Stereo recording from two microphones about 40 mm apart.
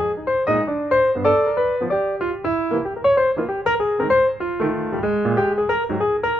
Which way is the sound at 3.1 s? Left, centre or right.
Centre.